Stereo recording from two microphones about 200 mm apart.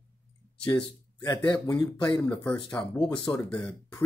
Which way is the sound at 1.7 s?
20° left (ahead or behind).